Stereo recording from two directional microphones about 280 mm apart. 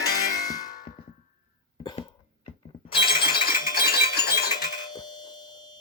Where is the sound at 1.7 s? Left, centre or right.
Centre.